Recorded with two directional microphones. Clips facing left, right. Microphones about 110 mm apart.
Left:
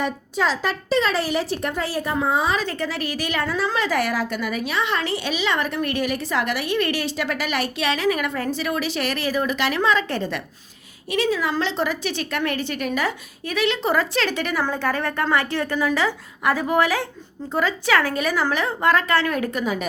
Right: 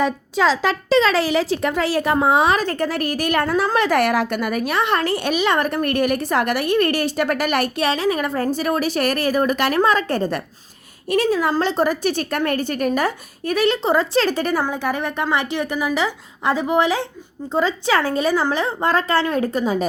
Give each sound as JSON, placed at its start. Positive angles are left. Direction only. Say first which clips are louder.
{"t": 0.3, "sound": "speech", "louder": "right 5 dB", "side_deg": -90}
{"t": 2.2, "sound": "a woman's voice", "louder": "right 5 dB", "side_deg": -70}
{"t": 2.6, "sound": "a woman's voice", "louder": "right 4 dB", "side_deg": -50}
{"t": 7.9, "sound": "a woman's voice", "louder": "right 2 dB", "side_deg": -30}
{"t": 13.8, "sound": "a woman's voice", "louder": "right 4 dB", "side_deg": -25}
{"t": 14.6, "sound": "a woman's voice", "louder": "right 1 dB", "side_deg": -15}